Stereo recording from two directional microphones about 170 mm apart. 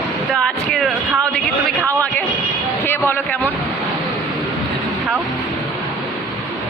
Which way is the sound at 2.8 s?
10° left (ahead or behind).